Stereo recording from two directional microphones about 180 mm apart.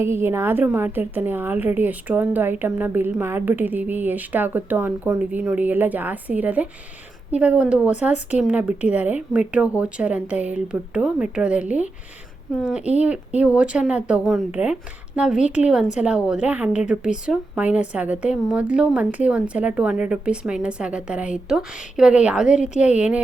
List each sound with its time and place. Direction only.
0.0 s a woman's voice: 15° right (ahead or behind)
22.4 s a woman's voice: 40° left (ahead or behind)
22.8 s a woman's voice: 5° right (ahead or behind)